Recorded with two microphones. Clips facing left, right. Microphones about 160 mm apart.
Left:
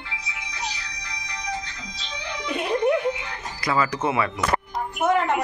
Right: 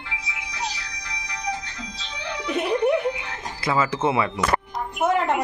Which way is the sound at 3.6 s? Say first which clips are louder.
Right 1 dB; 25° right (ahead or behind).